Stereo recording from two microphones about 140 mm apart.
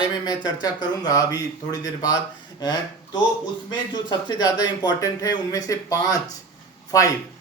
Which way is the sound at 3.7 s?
30° left (ahead or behind).